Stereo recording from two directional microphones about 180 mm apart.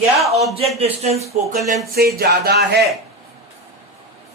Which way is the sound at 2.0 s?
60° right (ahead or behind).